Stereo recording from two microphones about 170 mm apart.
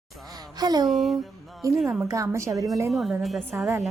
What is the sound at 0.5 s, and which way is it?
Speech, 25° right (ahead or behind).